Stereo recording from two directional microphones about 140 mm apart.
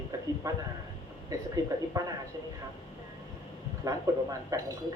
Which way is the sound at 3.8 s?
25° right (ahead or behind).